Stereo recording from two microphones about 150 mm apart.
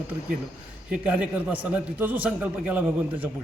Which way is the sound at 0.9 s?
5° right (ahead or behind).